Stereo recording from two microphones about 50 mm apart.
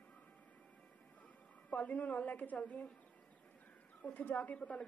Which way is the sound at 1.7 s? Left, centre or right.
Left.